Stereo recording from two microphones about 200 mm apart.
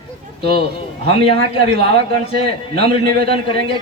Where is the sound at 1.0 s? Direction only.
25° left (ahead or behind).